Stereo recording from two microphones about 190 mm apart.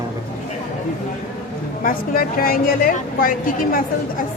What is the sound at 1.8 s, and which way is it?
A woman's voice, 50° left (ahead or behind).